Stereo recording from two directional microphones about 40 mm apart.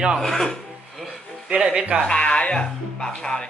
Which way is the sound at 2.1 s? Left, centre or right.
Left.